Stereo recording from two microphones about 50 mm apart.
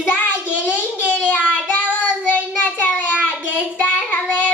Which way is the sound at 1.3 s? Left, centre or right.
Left.